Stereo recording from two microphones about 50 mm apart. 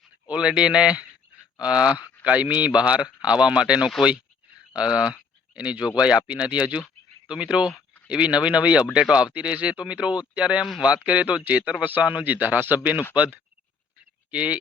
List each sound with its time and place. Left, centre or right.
0.3 s a man's voice: centre